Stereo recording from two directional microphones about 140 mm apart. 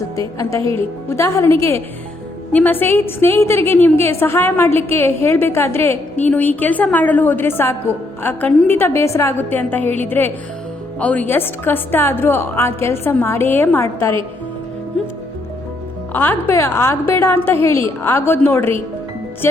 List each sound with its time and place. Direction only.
0.2 s a woman's voice: 25° left (ahead or behind)
15.0 s music: 5° left (ahead or behind)
16.1 s a woman's voice: 15° left (ahead or behind)